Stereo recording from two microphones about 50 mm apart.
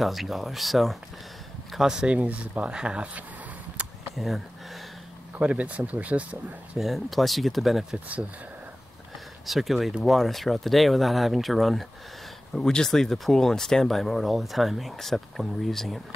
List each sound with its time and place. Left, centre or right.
0.0 s speech: centre
2.0 s speech: right
3.8 s a sound: right
4.1 s speech: centre
5.4 s speech: right
6.8 s speech: centre
9.5 s speech: centre
12.5 s speech: centre